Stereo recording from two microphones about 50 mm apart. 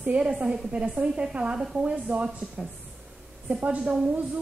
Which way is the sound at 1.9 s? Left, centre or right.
Right.